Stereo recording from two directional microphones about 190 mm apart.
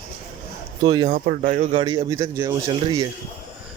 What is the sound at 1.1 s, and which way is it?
Speech, 45° right (ahead or behind).